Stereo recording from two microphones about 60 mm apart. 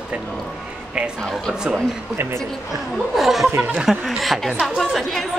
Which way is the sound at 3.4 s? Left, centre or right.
Right.